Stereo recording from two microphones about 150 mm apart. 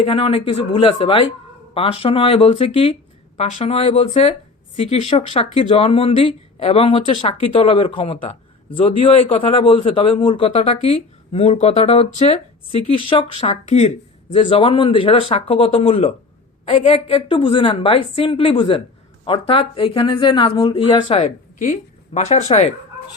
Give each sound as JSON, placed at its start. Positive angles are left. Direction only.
{"t": 0.0, "sound": "speech", "side_deg": 35}
{"t": 21.2, "sound": "speech", "side_deg": 55}